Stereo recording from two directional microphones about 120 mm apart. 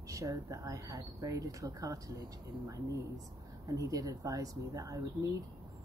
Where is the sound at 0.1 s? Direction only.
25° right (ahead or behind).